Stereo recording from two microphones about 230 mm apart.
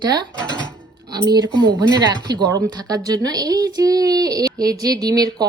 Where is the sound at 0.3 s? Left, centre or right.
Centre.